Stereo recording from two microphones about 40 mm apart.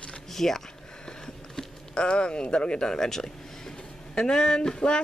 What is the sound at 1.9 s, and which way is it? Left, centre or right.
Speech, left.